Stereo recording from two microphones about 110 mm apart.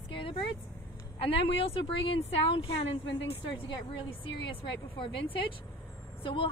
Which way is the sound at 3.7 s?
50° left (ahead or behind).